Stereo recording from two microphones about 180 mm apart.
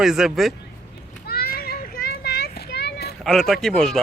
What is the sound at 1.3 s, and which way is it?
Children playing, 60° left (ahead or behind).